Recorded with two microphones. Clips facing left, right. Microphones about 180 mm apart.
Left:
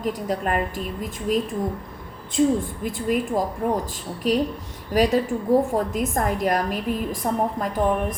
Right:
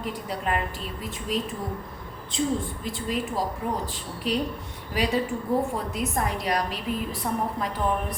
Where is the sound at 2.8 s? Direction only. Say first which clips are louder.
Left 6 dB; 55° left (ahead or behind).